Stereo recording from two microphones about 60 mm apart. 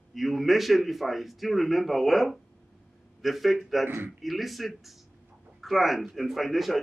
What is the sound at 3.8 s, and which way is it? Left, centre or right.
Speech, right.